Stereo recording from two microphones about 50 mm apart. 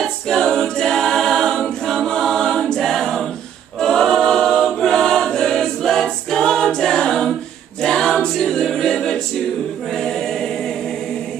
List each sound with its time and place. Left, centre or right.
0.3 s a capella: centre
2.0 s choir: centre
4.6 s a capella: centre
9.9 s choir: centre